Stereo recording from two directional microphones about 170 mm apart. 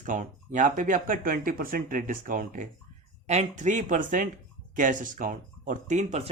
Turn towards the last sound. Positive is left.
turn(degrees=-40)  # may be behind; listen again after turning